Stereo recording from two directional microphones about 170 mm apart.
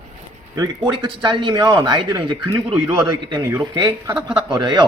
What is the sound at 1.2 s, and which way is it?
Speech, 30° right (ahead or behind).